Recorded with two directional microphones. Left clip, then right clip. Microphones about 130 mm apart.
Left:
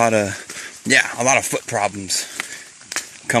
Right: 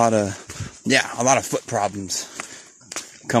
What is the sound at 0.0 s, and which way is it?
Speech, 30° right (ahead or behind).